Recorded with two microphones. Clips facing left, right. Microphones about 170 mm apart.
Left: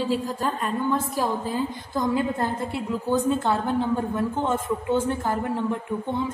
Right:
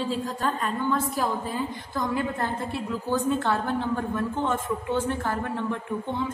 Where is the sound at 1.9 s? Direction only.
20° left (ahead or behind).